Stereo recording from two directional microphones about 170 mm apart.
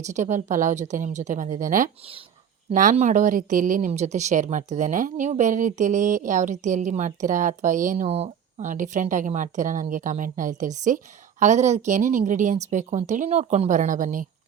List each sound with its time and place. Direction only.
0.0 s speech: 45° right (ahead or behind)
8.0 s speech: 40° right (ahead or behind)